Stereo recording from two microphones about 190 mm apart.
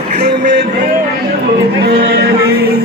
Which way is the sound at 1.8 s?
60° right (ahead or behind).